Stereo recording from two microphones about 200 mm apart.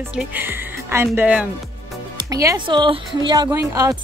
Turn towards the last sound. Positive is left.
turn(degrees=-15)  # may be behind; listen again after turning